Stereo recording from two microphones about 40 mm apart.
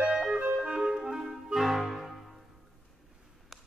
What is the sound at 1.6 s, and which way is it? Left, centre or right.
Music, centre.